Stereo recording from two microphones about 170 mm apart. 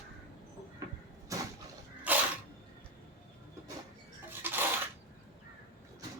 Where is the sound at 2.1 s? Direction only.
10° right (ahead or behind).